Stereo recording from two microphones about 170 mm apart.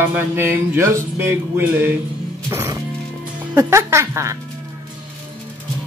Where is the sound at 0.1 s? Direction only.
15° right (ahead or behind).